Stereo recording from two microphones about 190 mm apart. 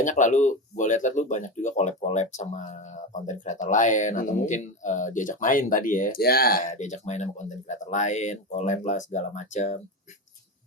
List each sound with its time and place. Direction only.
0.0 s speech: 40° left (ahead or behind)